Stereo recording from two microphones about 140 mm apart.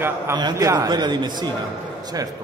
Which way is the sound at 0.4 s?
25° right (ahead or behind).